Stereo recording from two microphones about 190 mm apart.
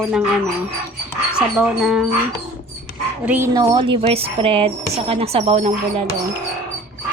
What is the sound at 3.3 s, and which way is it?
Speech, 15° right (ahead or behind).